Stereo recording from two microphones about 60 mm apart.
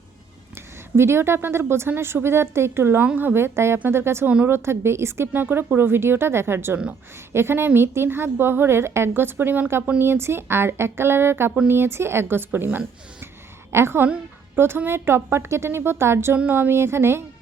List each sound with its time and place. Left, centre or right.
0.9 s a woman's voice: right